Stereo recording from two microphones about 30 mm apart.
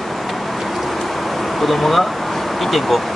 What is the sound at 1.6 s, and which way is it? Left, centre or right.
Speech, centre.